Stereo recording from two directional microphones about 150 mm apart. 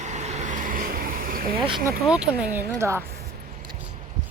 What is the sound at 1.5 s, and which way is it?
Speech, 35° right (ahead or behind).